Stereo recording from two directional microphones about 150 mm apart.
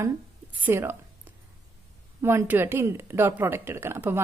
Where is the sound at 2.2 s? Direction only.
15° right (ahead or behind).